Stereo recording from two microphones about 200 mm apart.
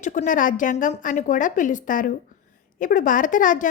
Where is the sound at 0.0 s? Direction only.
40° left (ahead or behind).